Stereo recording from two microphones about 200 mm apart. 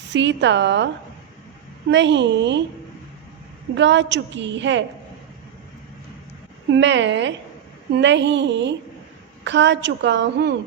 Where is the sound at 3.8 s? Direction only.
60° right (ahead or behind).